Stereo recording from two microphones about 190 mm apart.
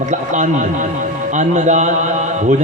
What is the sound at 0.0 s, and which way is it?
A man's voice, 40° right (ahead or behind).